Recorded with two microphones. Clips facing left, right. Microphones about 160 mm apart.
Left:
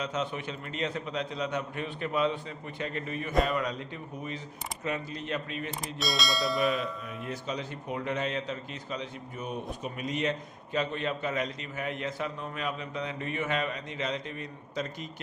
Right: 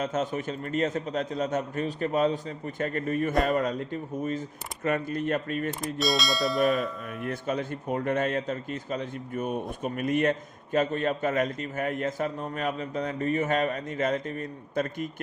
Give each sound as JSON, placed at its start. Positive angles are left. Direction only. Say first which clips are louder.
{"t": 0.0, "sound": "speech", "louder": "right 4 dB", "side_deg": -45}
{"t": 6.0, "sound": "speech", "louder": "right 4 dB", "side_deg": 0}
{"t": 7.2, "sound": "speech", "louder": "right 6 dB", "side_deg": -55}